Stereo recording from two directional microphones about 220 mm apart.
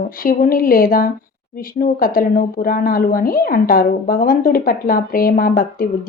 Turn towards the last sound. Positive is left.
turn(degrees=40)  # may be behind; listen again after turning